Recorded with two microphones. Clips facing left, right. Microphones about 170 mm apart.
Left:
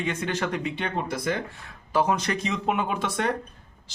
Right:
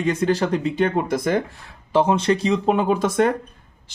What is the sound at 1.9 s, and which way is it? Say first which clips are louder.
A man's voice: right 6 dB; 25° right (ahead or behind).